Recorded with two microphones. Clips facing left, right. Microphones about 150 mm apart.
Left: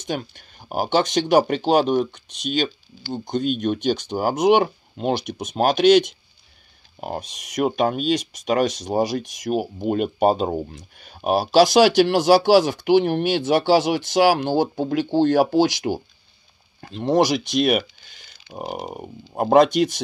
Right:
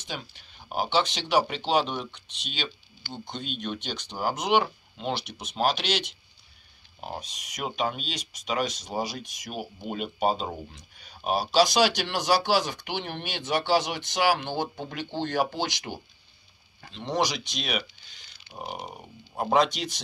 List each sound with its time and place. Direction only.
0.0 s speech: 50° left (ahead or behind)